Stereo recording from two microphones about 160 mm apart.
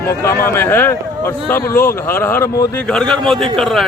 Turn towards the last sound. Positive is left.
turn(degrees=0)  # may be behind; listen again after turning